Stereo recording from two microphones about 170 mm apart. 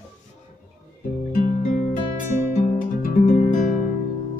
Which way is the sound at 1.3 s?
45° left (ahead or behind).